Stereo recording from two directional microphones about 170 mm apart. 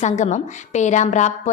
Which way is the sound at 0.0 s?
45° left (ahead or behind).